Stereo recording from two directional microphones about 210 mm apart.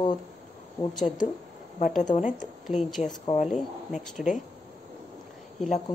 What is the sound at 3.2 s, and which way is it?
Speech, 25° left (ahead or behind).